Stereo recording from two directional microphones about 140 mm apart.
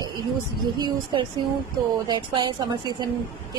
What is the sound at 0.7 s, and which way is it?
A woman's voice, 30° right (ahead or behind).